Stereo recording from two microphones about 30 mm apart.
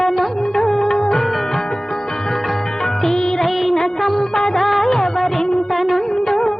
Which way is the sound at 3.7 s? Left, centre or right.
Centre.